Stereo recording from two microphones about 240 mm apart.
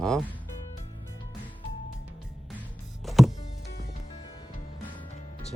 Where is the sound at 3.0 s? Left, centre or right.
Centre.